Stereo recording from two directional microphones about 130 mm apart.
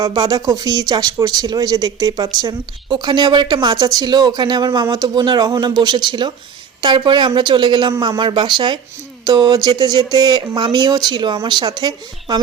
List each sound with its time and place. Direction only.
0.0 s speech: 35° right (ahead or behind)